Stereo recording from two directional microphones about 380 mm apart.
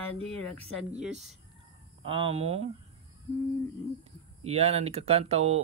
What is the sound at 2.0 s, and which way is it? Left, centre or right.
Speech, centre.